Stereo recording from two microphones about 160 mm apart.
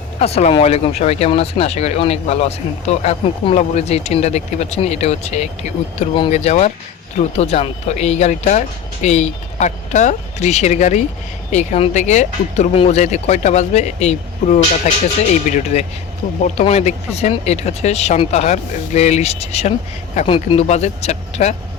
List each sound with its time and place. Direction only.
0.2 s speech: 40° left (ahead or behind)